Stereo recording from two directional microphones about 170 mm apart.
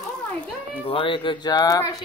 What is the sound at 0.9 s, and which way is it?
Speech, 30° left (ahead or behind).